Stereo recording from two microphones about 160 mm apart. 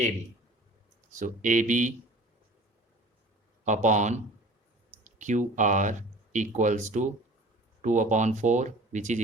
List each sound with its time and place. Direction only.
1.2 s speech: 55° right (ahead or behind)
3.6 s speech: 50° right (ahead or behind)